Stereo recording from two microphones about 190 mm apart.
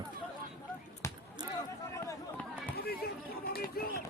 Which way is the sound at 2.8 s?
55° left (ahead or behind).